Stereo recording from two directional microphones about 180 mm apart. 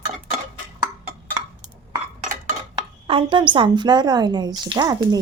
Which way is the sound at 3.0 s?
30° right (ahead or behind).